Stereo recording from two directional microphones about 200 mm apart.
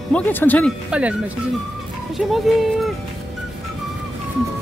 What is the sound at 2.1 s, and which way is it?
Speech, centre (ahead or behind).